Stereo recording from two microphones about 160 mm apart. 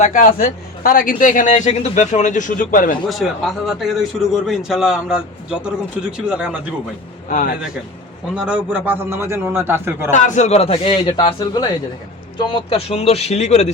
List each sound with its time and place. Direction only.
0.0 s a man's voice: 55° left (ahead or behind)
3.1 s a man's voice: centre (ahead or behind)
7.3 s speech: 60° left (ahead or behind)
8.4 s a man's voice: 5° right (ahead or behind)
10.1 s a man's voice: 50° left (ahead or behind)